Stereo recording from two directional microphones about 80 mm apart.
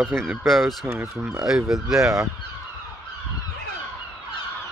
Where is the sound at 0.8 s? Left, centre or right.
Right.